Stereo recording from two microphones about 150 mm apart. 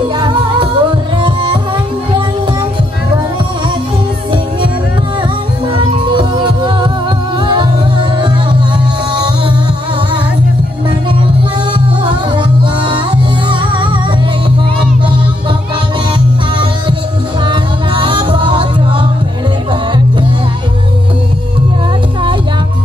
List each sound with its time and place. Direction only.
0.2 s music: 30° right (ahead or behind)
5.8 s music: 35° right (ahead or behind)
12.0 s music: 30° right (ahead or behind)
17.5 s music: 35° right (ahead or behind)